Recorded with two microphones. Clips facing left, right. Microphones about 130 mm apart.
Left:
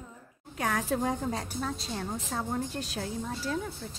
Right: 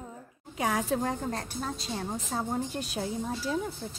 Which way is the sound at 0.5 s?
10° right (ahead or behind).